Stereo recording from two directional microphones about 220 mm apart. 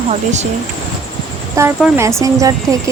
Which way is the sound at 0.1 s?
30° right (ahead or behind).